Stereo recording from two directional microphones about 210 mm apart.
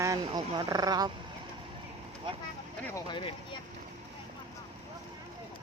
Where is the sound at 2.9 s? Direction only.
25° left (ahead or behind).